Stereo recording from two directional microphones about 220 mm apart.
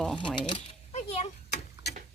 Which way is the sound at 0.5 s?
30° left (ahead or behind).